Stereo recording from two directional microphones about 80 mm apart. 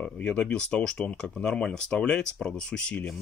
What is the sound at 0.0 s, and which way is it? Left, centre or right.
Speech, centre.